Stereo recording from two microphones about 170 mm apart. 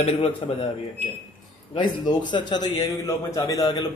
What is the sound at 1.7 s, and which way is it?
A man's voice, 25° left (ahead or behind).